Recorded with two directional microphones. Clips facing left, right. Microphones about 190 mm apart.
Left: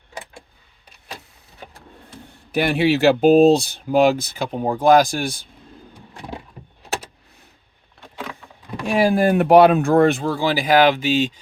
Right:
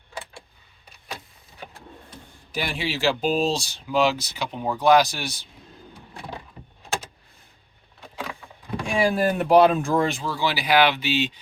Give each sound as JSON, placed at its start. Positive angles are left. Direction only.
{"t": 2.5, "sound": "speech", "side_deg": 60}
{"t": 8.9, "sound": "speech", "side_deg": 50}